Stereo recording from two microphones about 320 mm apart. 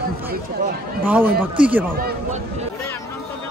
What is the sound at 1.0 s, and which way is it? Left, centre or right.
Speech, centre.